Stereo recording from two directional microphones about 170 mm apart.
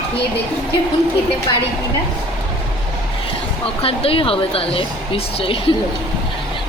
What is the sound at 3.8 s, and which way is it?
A woman's voice, 35° left (ahead or behind).